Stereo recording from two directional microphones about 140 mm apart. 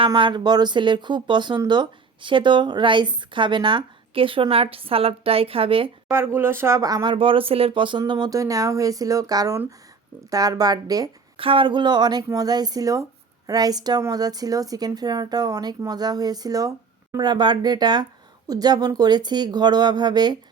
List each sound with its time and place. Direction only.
0.0 s speech: 35° right (ahead or behind)
6.1 s speech: 15° right (ahead or behind)
11.3 s speech: 40° right (ahead or behind)